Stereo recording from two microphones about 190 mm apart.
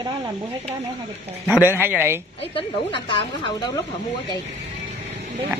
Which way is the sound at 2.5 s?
25° left (ahead or behind).